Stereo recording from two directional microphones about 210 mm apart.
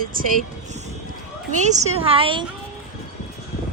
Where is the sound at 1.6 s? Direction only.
30° right (ahead or behind).